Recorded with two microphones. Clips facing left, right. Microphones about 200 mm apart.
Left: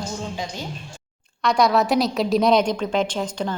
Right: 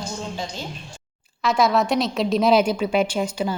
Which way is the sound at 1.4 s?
Centre (ahead or behind).